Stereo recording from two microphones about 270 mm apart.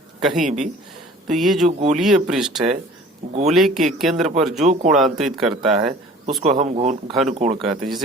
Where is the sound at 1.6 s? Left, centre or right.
Right.